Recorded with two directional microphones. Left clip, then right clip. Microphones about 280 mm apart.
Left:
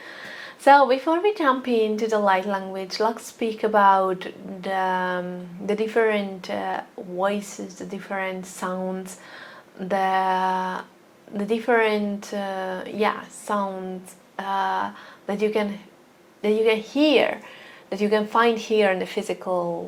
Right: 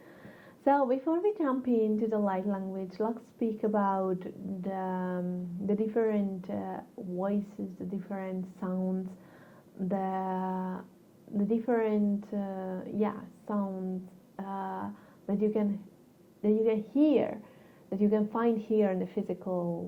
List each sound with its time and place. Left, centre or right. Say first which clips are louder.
0.1 s speech: left 18 dB; centre
19.5 s a woman's voice: left 11 dB; left